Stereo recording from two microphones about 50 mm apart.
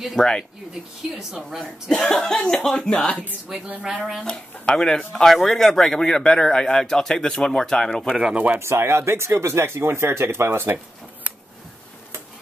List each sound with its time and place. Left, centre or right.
0.2 s speech: centre
1.1 s speech: centre
1.9 s speech: centre
3.4 s speech: centre
4.3 s speech: centre
8.2 s speech: right
8.5 s speech: right